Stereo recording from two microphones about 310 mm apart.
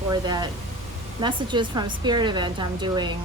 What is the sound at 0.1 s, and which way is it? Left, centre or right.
Speech, centre.